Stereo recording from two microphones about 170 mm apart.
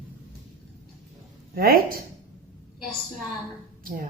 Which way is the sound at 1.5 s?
60° right (ahead or behind).